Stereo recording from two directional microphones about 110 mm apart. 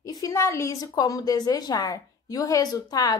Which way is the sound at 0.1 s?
30° left (ahead or behind).